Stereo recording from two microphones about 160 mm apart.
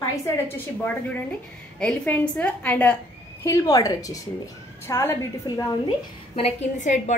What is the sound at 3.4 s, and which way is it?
A woman's voice, 20° left (ahead or behind).